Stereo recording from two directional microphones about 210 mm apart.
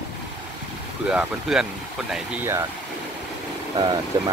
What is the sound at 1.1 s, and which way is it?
Speech, 5° right (ahead or behind).